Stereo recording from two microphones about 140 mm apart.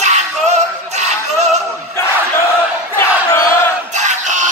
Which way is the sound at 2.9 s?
20° left (ahead or behind).